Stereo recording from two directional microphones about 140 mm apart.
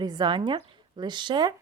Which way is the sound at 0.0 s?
30° right (ahead or behind).